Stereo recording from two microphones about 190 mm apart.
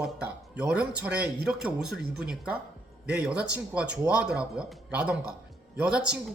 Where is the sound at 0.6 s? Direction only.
5° right (ahead or behind).